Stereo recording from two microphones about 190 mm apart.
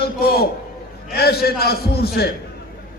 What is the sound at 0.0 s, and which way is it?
A man's voice, 55° left (ahead or behind).